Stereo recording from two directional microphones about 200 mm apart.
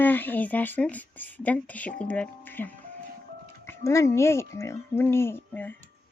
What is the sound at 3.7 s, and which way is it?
Speech, 15° left (ahead or behind).